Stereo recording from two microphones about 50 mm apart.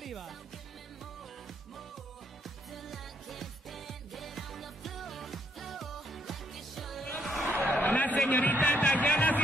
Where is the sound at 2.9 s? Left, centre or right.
Centre.